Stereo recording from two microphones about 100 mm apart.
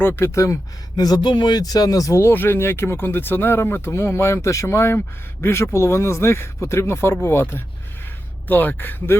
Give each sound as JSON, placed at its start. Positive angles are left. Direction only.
{"t": 0.0, "sound": "speech", "side_deg": 25}